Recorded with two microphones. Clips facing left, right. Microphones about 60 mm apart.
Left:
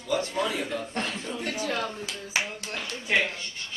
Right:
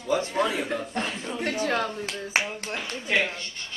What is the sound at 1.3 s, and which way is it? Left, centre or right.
Speech, right.